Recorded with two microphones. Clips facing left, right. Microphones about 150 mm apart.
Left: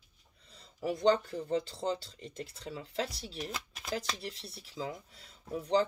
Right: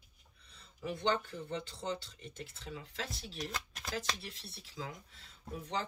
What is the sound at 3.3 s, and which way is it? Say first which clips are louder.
Speech: left 2 dB; 5° left (ahead or behind).